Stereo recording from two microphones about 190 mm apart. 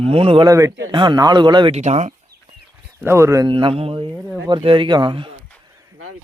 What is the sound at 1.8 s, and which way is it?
Speech, 35° right (ahead or behind).